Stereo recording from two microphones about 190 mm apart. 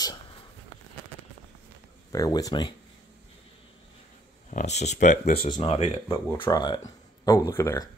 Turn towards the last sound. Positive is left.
turn(degrees=15)  # may be behind; listen again after turning